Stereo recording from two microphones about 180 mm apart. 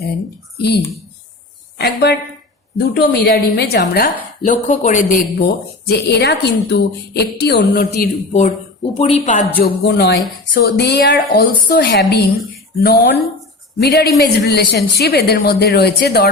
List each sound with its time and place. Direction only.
0.5 s speech: 65° left (ahead or behind)
1.8 s a woman's voice: 65° left (ahead or behind)
4.4 s speech: 45° left (ahead or behind)
5.9 s a woman's voice: 65° left (ahead or behind)
8.3 s a woman's voice: 40° left (ahead or behind)
9.8 s a woman's voice: 70° left (ahead or behind)